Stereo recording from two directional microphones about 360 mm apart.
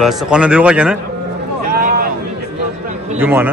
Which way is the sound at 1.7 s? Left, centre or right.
Right.